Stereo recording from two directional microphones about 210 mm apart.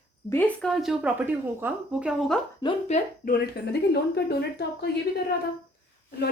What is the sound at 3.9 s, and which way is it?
A woman's voice, 50° left (ahead or behind).